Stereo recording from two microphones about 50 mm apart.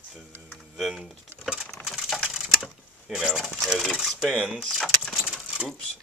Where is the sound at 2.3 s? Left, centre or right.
Centre.